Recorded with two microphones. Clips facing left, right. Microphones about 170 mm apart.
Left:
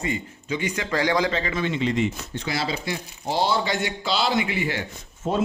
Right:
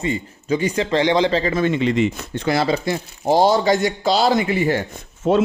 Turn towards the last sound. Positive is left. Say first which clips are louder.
# right 8 dB
turn(degrees=-75)  # may be behind; listen again after turning